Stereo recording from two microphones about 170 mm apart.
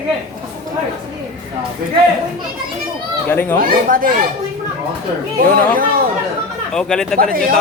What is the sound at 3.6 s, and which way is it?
Speech, 55° right (ahead or behind).